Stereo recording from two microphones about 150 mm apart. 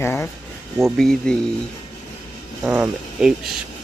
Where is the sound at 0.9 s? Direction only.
5° left (ahead or behind).